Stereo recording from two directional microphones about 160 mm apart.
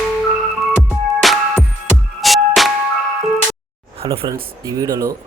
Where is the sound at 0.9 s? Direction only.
Centre (ahead or behind).